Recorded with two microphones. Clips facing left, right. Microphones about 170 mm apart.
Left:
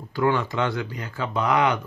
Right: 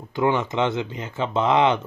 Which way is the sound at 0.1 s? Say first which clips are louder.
Right 1 dB; 20° right (ahead or behind).